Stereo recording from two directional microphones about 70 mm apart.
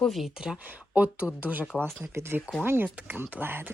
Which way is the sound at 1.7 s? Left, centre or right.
Centre.